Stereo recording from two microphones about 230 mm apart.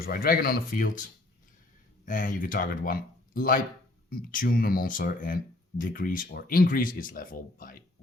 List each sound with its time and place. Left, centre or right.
0.0 s speech: left
2.0 s speech: left